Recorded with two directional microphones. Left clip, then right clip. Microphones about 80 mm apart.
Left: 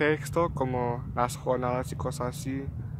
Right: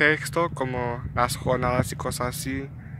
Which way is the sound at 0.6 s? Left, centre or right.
Left.